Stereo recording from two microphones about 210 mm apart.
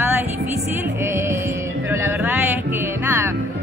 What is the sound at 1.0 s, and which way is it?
A man's voice, 10° right (ahead or behind).